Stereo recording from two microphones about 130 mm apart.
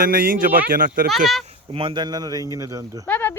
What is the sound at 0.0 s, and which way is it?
Speech, 90° right.